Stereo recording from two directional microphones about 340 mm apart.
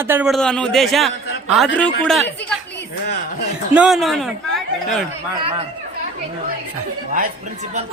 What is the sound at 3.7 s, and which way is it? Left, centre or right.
Speech, centre.